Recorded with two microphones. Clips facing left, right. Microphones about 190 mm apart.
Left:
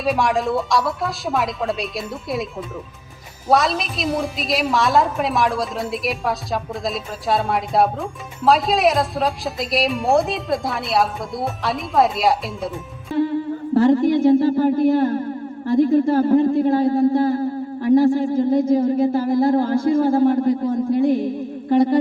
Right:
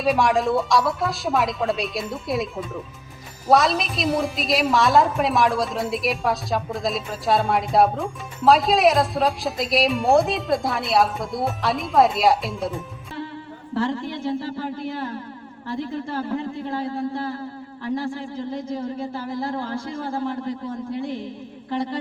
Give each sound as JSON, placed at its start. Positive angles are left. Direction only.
{"t": 0.0, "sound": "a woman's voice", "side_deg": 0}
{"t": 13.7, "sound": "speech", "side_deg": 40}
{"t": 21.2, "sound": "music", "side_deg": 45}